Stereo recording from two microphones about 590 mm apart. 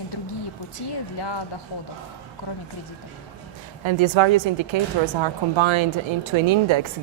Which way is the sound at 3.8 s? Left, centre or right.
Right.